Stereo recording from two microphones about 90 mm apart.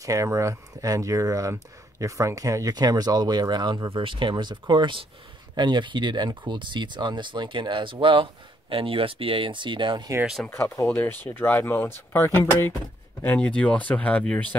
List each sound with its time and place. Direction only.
0.0 s speech: 35° right (ahead or behind); by 3.9 s 55° right (ahead or behind)
3.9 s speech: 70° right (ahead or behind)
10.5 s speech: 30° left (ahead or behind)
10.9 s speech: 20° left (ahead or behind)